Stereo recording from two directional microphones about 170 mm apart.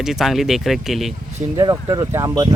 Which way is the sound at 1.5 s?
25° right (ahead or behind).